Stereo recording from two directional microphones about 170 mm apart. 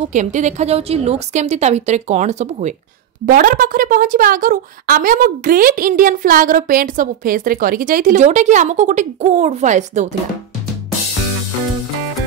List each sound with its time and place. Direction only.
0.1 s a woman's voice: 45° right (ahead or behind)
3.3 s speech: 55° right (ahead or behind)